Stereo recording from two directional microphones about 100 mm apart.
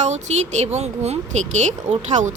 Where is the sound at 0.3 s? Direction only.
90° right.